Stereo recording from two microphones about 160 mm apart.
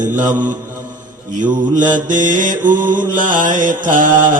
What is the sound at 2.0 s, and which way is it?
Mantra, 55° right (ahead or behind).